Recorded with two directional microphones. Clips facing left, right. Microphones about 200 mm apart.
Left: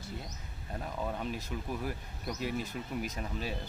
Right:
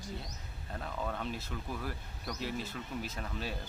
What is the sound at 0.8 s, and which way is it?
Speech, 15° left (ahead or behind).